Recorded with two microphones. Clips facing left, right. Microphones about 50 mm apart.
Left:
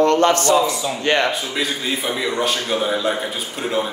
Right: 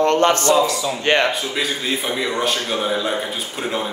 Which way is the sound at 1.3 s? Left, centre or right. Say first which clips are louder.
Even; centre.